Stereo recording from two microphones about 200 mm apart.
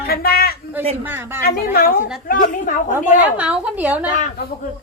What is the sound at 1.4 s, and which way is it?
A woman's voice, 50° left (ahead or behind).